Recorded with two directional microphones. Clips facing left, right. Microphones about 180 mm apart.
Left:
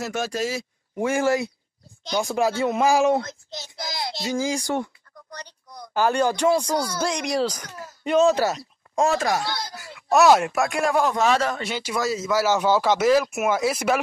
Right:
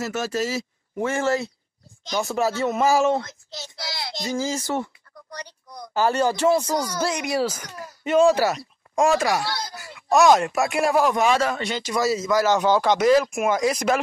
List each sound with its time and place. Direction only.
0.0 s speech: 5° right (ahead or behind)
3.4 s a child's voice: 15° left (ahead or behind)
4.1 s a man's voice: centre (ahead or behind)
10.0 s speech: 5° left (ahead or behind)
10.6 s a man's voice: 5° right (ahead or behind)
11.6 s speech: 5° left (ahead or behind)